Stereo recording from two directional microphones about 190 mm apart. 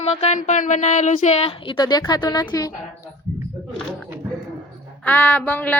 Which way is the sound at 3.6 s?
Centre (ahead or behind).